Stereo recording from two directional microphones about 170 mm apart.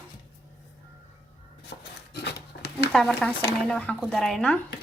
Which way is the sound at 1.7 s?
70° left (ahead or behind).